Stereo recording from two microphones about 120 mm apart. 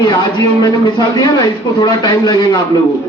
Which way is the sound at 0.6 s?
30° left (ahead or behind).